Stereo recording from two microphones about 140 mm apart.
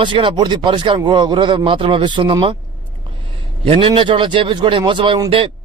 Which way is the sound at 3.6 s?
40° right (ahead or behind).